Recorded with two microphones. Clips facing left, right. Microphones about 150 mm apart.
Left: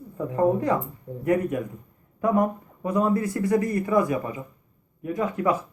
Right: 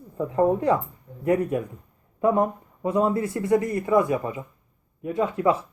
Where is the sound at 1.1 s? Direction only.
40° left (ahead or behind).